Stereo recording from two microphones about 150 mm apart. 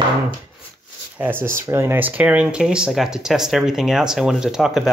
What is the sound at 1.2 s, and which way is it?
Speech, 15° right (ahead or behind).